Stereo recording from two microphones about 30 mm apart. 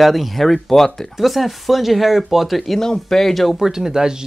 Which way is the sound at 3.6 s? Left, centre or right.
Centre.